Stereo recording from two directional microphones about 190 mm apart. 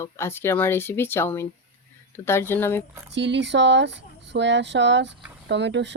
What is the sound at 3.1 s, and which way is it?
Speech, 70° right (ahead or behind).